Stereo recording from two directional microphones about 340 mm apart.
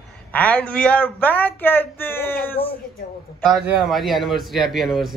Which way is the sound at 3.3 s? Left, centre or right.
Centre.